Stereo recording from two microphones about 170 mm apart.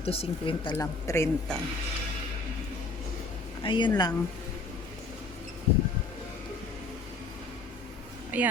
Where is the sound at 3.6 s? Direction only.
25° left (ahead or behind).